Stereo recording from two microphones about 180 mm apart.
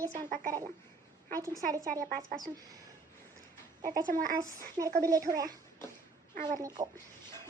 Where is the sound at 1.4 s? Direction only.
20° right (ahead or behind).